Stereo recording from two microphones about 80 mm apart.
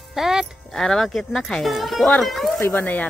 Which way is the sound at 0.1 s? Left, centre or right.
Centre.